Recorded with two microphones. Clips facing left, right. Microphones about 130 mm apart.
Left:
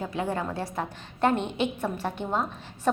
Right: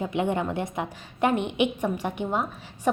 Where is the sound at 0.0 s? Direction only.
20° right (ahead or behind).